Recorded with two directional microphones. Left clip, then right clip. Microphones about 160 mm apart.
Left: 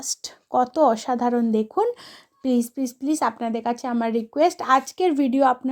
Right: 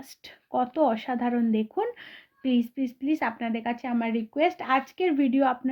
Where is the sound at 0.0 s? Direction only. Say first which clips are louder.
Left 14 dB; 40° left (ahead or behind).